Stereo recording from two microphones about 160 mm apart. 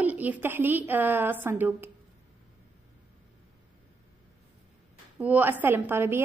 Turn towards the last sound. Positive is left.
turn(degrees=-15)  # may be behind; listen again after turning